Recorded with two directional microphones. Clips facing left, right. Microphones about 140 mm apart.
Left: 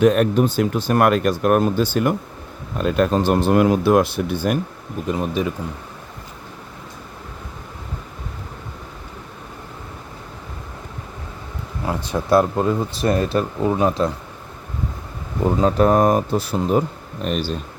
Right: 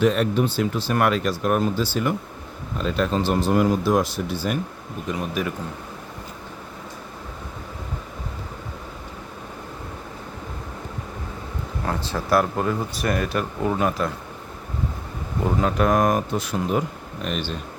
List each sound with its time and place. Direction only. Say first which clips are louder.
0.0 s speech: left 4 dB; 50° left (ahead or behind)
5.1 s speech: left 4 dB; 30° left (ahead or behind)
11.9 s speech: left 4 dB; 15° left (ahead or behind)
15.6 s speech: left 5 dB; 30° left (ahead or behind)